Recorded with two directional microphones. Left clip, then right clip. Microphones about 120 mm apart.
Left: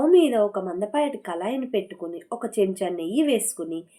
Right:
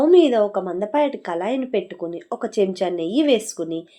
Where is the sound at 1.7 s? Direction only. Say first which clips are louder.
Right 3 dB; 30° right (ahead or behind).